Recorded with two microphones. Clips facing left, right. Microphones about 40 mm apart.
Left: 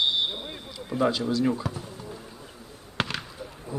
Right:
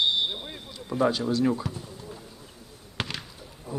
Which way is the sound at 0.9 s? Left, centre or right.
Left.